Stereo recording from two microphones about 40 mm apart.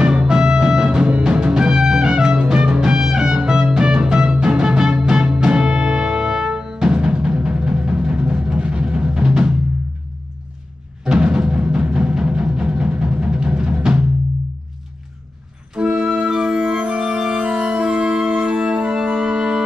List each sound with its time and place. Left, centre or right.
0.0 s music: right
11.1 s music: right
15.7 s music: centre